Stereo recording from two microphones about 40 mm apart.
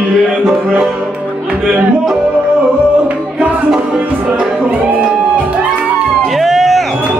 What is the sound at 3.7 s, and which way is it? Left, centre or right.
Music, centre.